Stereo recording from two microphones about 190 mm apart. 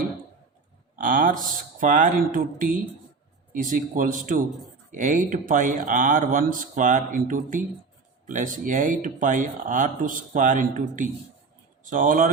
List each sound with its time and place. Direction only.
0.9 s speech: 45° right (ahead or behind)